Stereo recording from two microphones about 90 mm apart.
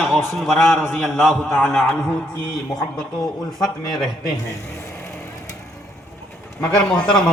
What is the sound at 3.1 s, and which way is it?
Speech, 50° left (ahead or behind).